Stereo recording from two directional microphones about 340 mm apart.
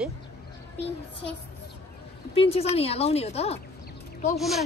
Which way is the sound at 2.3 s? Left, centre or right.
Centre.